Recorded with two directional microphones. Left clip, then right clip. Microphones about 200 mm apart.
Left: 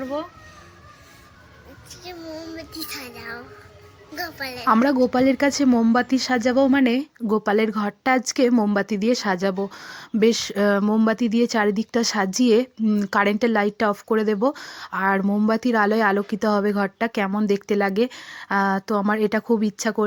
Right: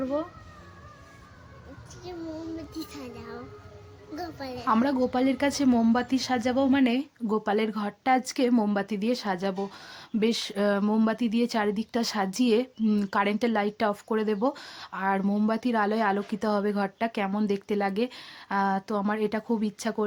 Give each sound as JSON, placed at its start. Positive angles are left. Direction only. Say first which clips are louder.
{"t": 2.6, "sound": "a child's voice", "louder": "left 5 dB", "side_deg": -20}
{"t": 4.6, "sound": "speech", "louder": "left 7 dB", "side_deg": 30}